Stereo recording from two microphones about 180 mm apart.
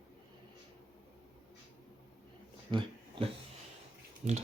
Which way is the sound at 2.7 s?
25° right (ahead or behind).